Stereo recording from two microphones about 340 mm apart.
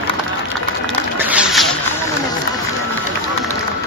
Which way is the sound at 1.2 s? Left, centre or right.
Centre.